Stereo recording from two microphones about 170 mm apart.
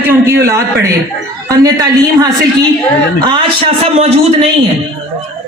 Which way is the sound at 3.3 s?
35° right (ahead or behind).